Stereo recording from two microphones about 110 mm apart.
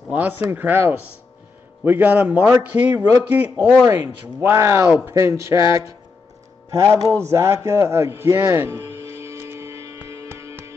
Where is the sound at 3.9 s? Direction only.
20° right (ahead or behind).